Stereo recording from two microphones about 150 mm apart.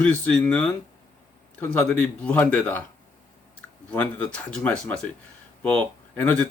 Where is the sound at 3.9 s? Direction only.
10° left (ahead or behind).